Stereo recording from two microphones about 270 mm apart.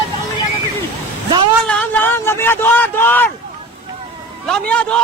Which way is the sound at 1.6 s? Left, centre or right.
Centre.